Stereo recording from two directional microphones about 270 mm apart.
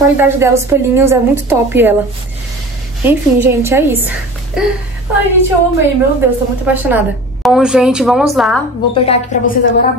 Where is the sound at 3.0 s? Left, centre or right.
Centre.